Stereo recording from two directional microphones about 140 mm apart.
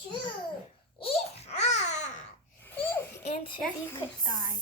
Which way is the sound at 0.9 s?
45° left (ahead or behind).